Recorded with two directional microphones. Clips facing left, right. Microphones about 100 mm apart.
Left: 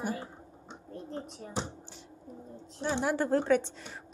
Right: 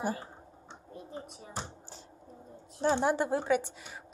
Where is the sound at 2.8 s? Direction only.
40° right (ahead or behind).